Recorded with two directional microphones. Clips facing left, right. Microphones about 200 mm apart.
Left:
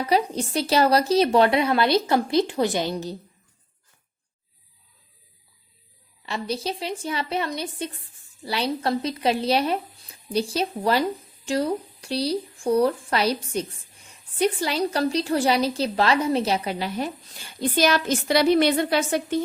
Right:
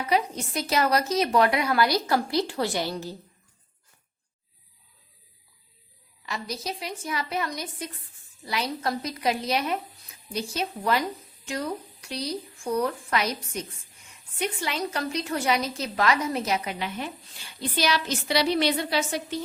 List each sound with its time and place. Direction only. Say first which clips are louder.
0.0 s a woman's voice: left 3 dB; 35° left (ahead or behind)
6.2 s a woman's voice: left 5 dB; 30° left (ahead or behind)
17.6 s a woman's voice: left 5 dB; 50° left (ahead or behind)